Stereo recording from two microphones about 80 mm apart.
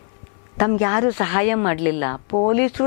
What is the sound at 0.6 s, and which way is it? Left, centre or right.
Speech, centre.